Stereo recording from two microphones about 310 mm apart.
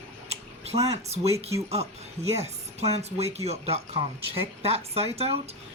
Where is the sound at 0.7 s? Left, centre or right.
Right.